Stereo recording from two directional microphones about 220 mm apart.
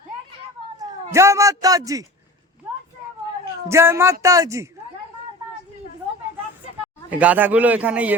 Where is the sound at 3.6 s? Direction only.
10° right (ahead or behind).